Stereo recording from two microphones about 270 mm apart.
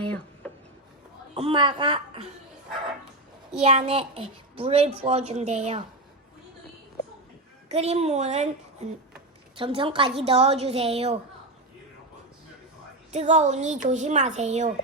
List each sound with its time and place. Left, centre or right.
0.4 s a sound: centre
1.4 s a child's voice: centre
3.6 s a child's voice: right
7.7 s a child's voice: right
13.1 s a child's voice: right